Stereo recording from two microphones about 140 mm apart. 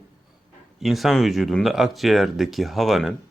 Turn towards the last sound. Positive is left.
turn(degrees=0)  # may be behind; listen again after turning